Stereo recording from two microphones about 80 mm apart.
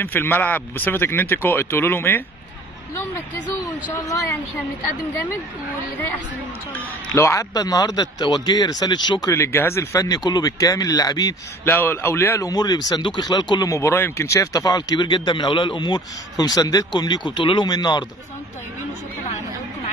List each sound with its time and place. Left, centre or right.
0.0 s speech: left
3.9 s speech: left
6.7 s speech: left
7.5 s speech: left
9.3 s speech: left
9.9 s speech: left
11.6 s speech: left
12.4 s speech: left
13.0 s speech: left
13.7 s speech: left
17.7 s speech: left